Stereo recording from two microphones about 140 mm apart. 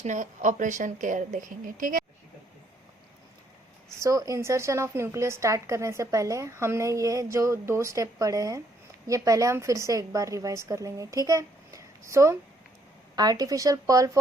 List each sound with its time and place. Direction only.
0.0 s speech: 60° right (ahead or behind)
3.9 s a woman's voice: 25° right (ahead or behind)